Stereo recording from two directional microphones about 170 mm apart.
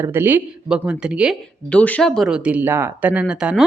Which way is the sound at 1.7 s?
10° left (ahead or behind).